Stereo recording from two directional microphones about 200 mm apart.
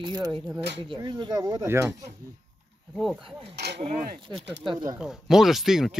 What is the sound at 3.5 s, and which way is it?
Speech, 55° right (ahead or behind).